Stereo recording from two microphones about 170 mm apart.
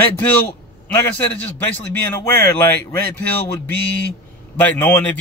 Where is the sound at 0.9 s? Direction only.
10° left (ahead or behind).